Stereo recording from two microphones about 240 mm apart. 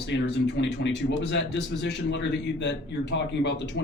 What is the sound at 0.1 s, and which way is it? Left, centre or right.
A man's voice, left.